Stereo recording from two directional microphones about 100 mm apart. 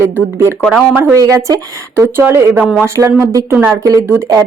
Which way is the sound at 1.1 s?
35° right (ahead or behind).